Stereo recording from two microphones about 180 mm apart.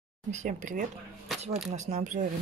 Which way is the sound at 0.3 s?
40° right (ahead or behind).